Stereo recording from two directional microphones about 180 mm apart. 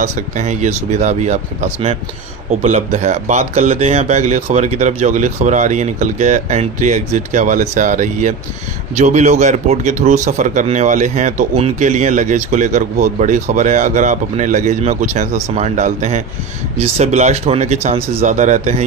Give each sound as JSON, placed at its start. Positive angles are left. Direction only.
{"t": 0.0, "sound": "speech", "side_deg": -40}